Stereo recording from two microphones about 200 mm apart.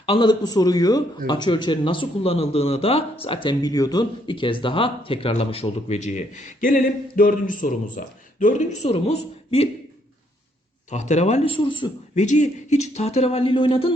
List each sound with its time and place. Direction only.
0.0 s a man's voice: 25° left (ahead or behind)
10.9 s speech: 35° left (ahead or behind)
12.2 s speech: 35° left (ahead or behind)